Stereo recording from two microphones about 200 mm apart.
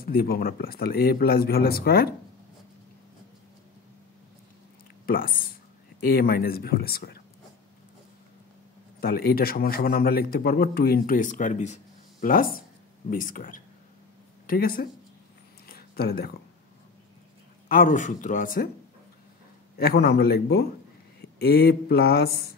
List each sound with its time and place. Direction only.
0.0 s a man's voice: 50° left (ahead or behind)
5.0 s a man's voice: 45° left (ahead or behind)
9.0 s a man's voice: 50° left (ahead or behind)
15.6 s a sound: 50° left (ahead or behind)
17.6 s speech: 40° left (ahead or behind)
19.8 s a man's voice: 50° left (ahead or behind)